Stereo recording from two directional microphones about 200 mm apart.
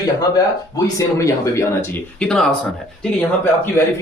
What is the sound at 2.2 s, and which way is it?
Speech, 5° left (ahead or behind).